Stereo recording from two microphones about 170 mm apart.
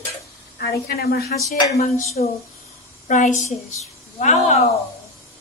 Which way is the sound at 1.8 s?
40° left (ahead or behind).